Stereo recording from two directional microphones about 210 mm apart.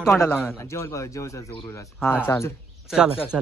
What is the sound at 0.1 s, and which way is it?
A man's voice, 10° left (ahead or behind).